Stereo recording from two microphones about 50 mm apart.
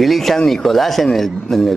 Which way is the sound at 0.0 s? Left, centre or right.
Centre.